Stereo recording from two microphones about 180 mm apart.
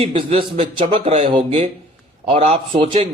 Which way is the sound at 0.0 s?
30° right (ahead or behind).